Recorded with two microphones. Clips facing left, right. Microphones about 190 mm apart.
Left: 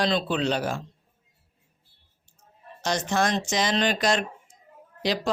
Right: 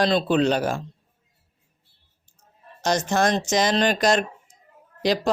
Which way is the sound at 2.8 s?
45° right (ahead or behind).